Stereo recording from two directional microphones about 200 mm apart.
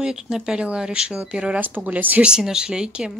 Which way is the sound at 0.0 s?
5° right (ahead or behind).